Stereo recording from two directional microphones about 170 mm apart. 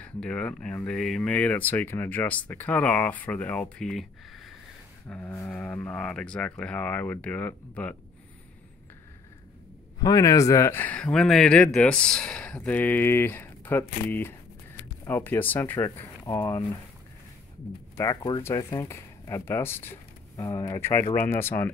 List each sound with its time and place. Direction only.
0.0 s speech: 5° left (ahead or behind)
5.1 s speech: 15° left (ahead or behind)
9.9 s speech: 20° left (ahead or behind)
17.9 s speech: 20° left (ahead or behind)